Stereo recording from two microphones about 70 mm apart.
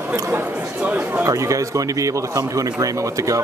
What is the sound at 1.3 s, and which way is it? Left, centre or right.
Speech, right.